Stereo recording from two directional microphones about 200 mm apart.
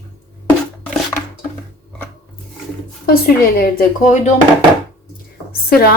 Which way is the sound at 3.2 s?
45° left (ahead or behind).